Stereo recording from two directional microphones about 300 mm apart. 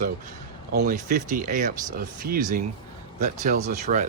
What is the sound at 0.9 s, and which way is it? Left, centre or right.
Speech, right.